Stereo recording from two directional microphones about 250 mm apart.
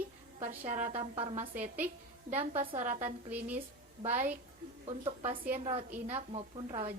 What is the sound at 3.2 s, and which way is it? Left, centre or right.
A woman's voice, centre.